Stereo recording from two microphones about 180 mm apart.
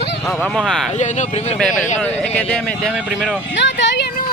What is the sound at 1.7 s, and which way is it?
Speech, 45° left (ahead or behind).